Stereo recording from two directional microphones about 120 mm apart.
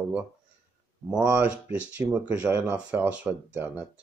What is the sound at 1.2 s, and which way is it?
Speech, 15° right (ahead or behind).